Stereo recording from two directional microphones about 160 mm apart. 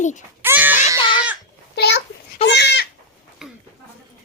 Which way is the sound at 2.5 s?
90° left.